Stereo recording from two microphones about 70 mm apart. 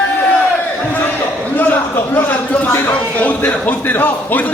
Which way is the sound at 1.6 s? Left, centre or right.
Left.